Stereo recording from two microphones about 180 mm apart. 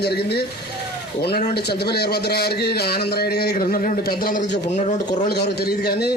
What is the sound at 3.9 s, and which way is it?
Speech, 50° left (ahead or behind).